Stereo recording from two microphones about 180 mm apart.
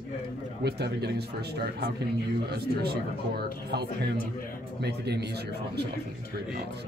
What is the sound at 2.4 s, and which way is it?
Speech, 60° right (ahead or behind).